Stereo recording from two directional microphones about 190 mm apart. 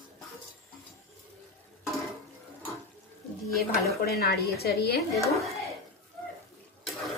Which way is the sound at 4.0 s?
55° left (ahead or behind).